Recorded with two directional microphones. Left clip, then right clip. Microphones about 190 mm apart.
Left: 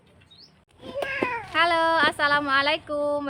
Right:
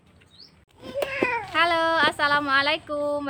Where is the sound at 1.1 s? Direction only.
20° right (ahead or behind).